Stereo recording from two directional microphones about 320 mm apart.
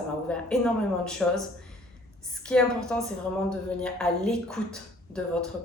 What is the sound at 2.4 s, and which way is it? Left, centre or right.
Speech, centre.